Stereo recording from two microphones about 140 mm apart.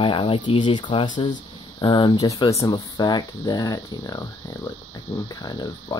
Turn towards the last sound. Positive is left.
turn(degrees=30)  # may be behind; listen again after turning